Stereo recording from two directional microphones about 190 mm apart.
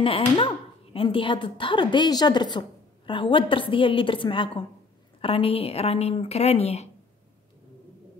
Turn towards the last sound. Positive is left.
turn(degrees=35)  # may be behind; listen again after turning